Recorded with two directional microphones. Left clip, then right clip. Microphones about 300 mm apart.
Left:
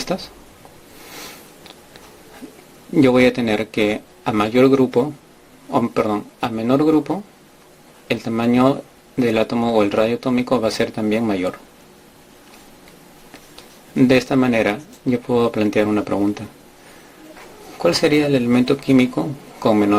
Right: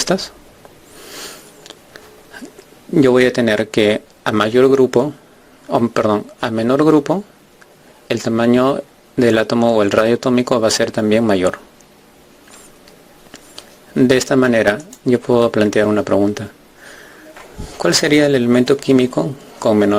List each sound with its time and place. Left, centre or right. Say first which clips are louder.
0.0 s speech: right 7 dB; right
2.9 s speech: right 2 dB; right
13.6 s speech: right 2 dB; right
17.8 s speech: right 3 dB; right